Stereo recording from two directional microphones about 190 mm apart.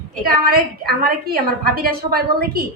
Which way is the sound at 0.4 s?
50° right (ahead or behind).